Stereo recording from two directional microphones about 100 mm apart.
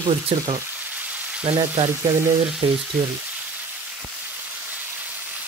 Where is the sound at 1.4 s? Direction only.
90° right.